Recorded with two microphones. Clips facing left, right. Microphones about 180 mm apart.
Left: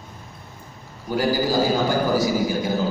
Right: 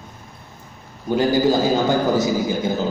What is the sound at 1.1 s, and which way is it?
A man's voice, 20° right (ahead or behind).